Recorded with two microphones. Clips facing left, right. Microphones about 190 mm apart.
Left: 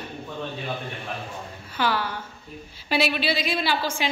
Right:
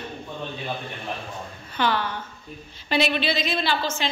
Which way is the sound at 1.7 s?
5° left (ahead or behind).